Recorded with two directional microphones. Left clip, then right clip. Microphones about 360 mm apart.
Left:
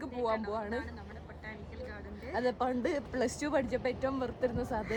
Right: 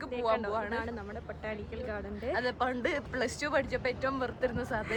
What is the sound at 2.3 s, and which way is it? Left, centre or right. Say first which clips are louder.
Speech: even; centre.